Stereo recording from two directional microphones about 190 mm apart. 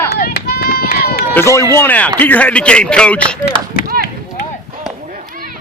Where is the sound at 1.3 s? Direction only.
15° left (ahead or behind).